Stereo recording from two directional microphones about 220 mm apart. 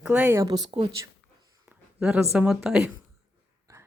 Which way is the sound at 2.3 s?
5° right (ahead or behind).